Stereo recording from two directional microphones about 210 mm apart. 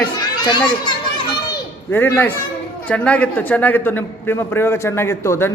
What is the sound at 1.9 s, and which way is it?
A man's voice, 10° left (ahead or behind).